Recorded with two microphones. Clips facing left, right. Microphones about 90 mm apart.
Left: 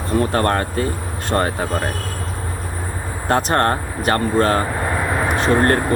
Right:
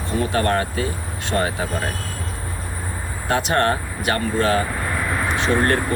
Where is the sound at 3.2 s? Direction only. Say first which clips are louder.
Left 2 dB; 40° left (ahead or behind).